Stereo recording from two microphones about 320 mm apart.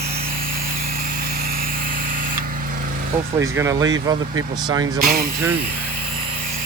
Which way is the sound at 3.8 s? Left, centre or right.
Right.